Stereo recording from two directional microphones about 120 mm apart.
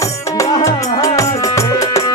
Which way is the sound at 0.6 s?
25° left (ahead or behind).